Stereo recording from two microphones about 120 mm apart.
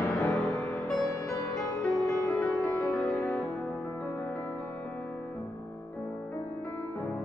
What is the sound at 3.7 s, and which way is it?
Music, 25° left (ahead or behind).